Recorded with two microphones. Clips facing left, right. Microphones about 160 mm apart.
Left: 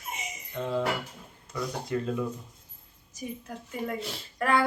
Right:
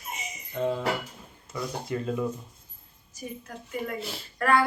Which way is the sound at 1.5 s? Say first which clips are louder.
Left 1 dB; 5° right (ahead or behind).